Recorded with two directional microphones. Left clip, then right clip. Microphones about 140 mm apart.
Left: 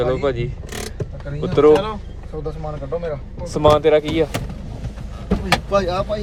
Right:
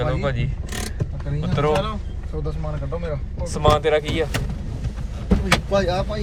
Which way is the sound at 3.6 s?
40° left (ahead or behind).